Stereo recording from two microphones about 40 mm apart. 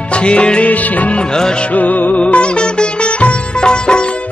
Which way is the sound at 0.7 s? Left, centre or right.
Left.